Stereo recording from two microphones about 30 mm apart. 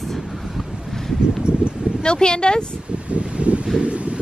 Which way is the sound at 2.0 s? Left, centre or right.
Left.